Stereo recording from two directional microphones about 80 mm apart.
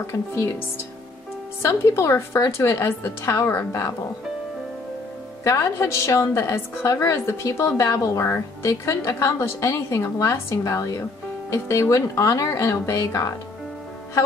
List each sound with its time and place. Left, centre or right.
0.0 s a woman's voice: left
1.6 s a woman's voice: left
5.4 s a woman's voice: left